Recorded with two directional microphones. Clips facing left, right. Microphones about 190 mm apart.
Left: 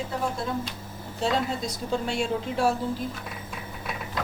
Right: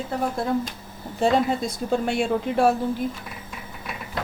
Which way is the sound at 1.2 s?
55° right (ahead or behind).